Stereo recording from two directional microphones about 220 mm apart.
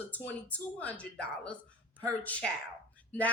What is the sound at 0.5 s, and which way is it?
A woman's voice, 5° left (ahead or behind).